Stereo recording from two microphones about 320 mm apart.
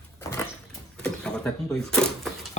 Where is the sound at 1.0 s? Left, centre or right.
Centre.